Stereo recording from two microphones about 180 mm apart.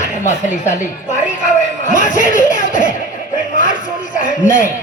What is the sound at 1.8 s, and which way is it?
Speech, 45° left (ahead or behind).